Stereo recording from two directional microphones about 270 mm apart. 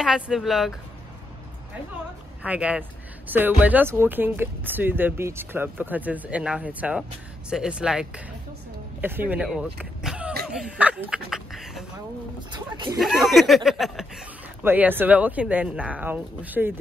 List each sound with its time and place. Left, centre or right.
0.0 s speech: centre
2.4 s speech: centre
12.5 s speech: centre
13.0 s speech: centre